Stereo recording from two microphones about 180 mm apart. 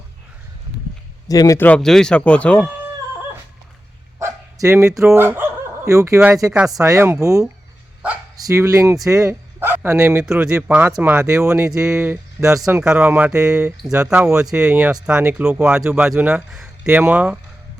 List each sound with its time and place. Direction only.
1.3 s speech: 20° left (ahead or behind)
4.2 s dog: 15° right (ahead or behind)
5.1 s speech: 10° right (ahead or behind)
12.8 s speech: 5° right (ahead or behind)